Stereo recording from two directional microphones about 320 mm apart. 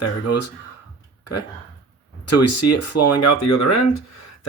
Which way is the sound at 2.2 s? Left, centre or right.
Left.